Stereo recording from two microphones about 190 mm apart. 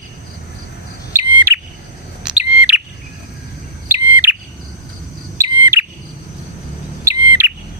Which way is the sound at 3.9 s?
10° right (ahead or behind).